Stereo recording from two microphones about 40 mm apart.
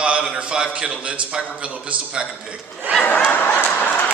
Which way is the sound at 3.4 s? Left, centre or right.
Left.